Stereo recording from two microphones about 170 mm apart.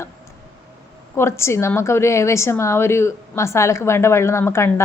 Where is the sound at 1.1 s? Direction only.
15° left (ahead or behind).